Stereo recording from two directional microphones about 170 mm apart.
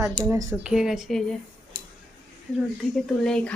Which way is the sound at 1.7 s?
25° right (ahead or behind).